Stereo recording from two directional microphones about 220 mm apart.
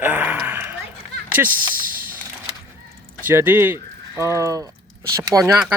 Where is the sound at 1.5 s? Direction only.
40° right (ahead or behind).